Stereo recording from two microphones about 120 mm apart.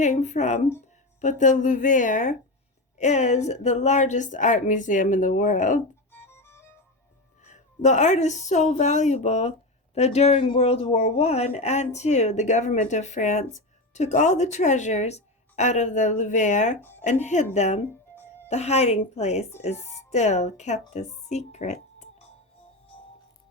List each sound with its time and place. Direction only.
0.0 s speech: 80° left
1.2 s a woman's voice: 90° left
3.0 s a woman's voice: 75° left (ahead or behind)
6.1 s music: 20° left (ahead or behind)
7.4 s a woman's voice: 85° left; by 10.4 s 65° left (ahead or behind)
10.4 s speech: 50° left (ahead or behind); by 16.7 s 90° left
17.0 s a woman's voice: 80° left